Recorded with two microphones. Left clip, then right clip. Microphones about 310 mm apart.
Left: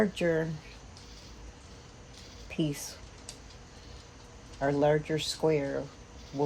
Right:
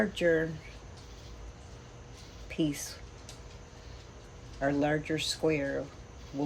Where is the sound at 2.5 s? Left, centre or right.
Left.